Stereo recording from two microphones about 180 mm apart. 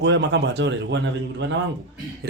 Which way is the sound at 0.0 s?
75° right (ahead or behind).